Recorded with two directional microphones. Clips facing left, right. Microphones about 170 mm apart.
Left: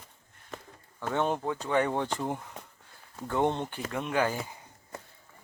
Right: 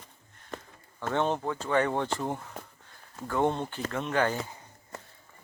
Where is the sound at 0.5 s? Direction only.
5° left (ahead or behind).